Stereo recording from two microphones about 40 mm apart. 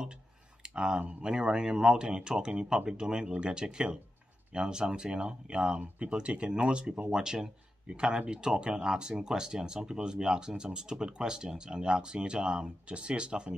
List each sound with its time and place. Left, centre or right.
0.7 s speech: right
7.1 s speech: centre